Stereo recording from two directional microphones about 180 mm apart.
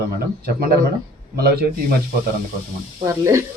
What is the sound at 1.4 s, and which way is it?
Speech, 60° right (ahead or behind).